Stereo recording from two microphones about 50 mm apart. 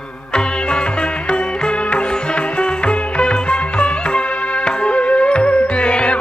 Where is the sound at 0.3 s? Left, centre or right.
Centre.